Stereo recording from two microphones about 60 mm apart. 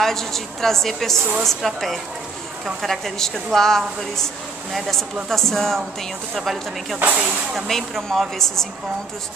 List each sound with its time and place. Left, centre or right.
0.0 s speech: centre
7.0 s speech: right
7.2 s speech: centre